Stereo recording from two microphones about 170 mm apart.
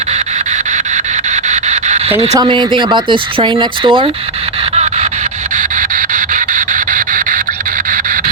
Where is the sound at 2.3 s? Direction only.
25° right (ahead or behind).